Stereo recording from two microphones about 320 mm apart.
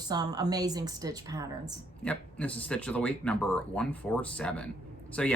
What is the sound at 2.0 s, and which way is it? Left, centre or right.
Speech, centre.